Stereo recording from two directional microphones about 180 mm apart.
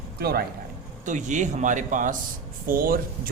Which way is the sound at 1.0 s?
45° right (ahead or behind).